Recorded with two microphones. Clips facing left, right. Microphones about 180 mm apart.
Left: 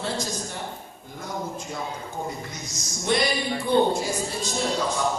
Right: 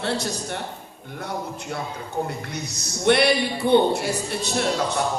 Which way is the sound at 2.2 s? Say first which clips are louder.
Right 3 dB; 65° right (ahead or behind).